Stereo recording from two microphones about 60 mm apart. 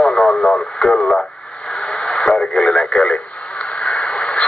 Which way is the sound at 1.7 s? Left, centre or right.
Centre.